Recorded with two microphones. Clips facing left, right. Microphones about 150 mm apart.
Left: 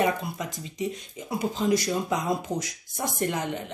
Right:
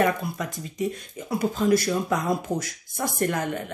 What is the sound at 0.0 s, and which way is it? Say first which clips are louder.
Speech: right 2 dB; 20° left (ahead or behind).